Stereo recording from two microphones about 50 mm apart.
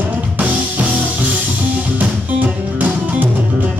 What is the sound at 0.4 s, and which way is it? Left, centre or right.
Music, right.